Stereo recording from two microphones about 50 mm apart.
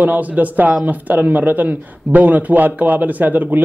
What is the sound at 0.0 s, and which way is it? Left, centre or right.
Speech, right.